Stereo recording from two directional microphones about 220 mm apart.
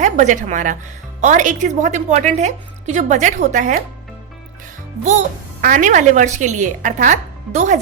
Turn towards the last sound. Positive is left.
turn(degrees=-35)  # may be behind; listen again after turning